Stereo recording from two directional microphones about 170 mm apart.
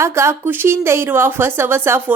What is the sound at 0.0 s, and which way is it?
A woman's voice, 15° right (ahead or behind).